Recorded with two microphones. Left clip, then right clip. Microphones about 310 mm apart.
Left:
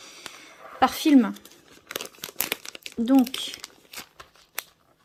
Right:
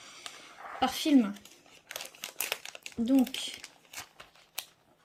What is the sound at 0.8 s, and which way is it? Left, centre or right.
Speech, centre.